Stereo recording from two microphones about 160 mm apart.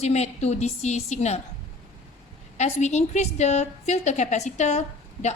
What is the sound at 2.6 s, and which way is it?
A woman's voice, 45° left (ahead or behind).